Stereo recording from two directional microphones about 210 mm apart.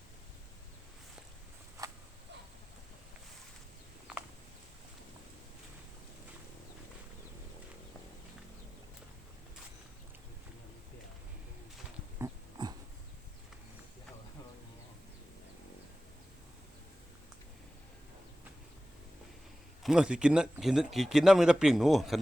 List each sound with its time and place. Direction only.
12.2 s pig: 20° right (ahead or behind)
19.8 s speech: 5° right (ahead or behind)